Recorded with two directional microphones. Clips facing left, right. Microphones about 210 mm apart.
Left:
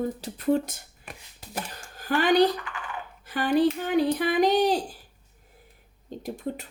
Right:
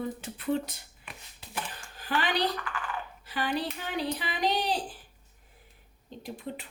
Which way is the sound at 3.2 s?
50° left (ahead or behind).